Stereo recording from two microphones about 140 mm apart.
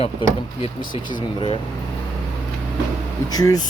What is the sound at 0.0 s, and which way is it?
Speech, 45° left (ahead or behind).